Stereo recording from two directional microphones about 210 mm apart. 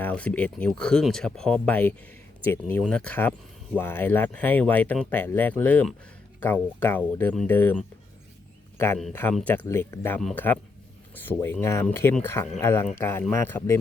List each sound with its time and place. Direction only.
0.0 s speech: 5° left (ahead or behind)
9.0 s speech: 5° left (ahead or behind)